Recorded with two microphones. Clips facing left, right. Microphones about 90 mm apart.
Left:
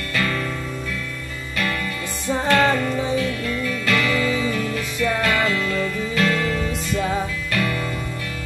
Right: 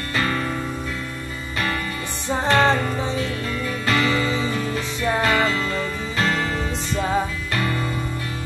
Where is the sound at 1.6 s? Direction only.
30° right (ahead or behind).